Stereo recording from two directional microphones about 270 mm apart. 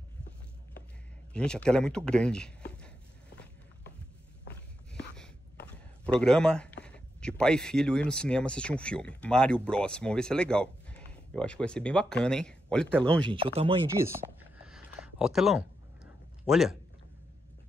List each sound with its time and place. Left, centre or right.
1.3 s speech: centre
6.0 s speech: centre
13.3 s speech: right
13.8 s speech: centre
14.7 s a sound: centre